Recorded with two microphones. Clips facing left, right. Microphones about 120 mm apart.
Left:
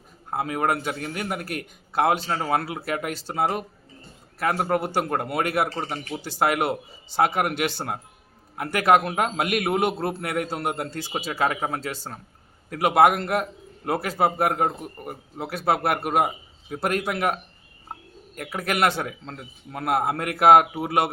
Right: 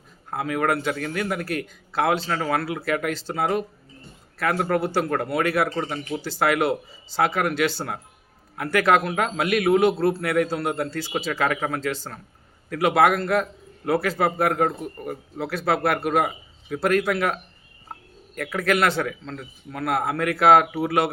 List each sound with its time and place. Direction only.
0.3 s a man's voice: 25° left (ahead or behind)
2.3 s a man's voice: 25° left (ahead or behind)
3.1 s speech: 15° left (ahead or behind)
3.3 s a man's voice: 30° left (ahead or behind)
18.6 s speech: 15° left (ahead or behind)
19.2 s a man's voice: 30° left (ahead or behind)